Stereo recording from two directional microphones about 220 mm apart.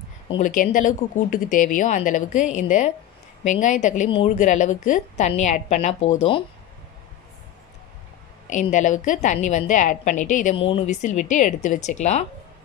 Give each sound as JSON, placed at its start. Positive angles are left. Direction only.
{"t": 0.4, "sound": "a woman's voice", "side_deg": 35}
{"t": 8.5, "sound": "a woman's voice", "side_deg": 35}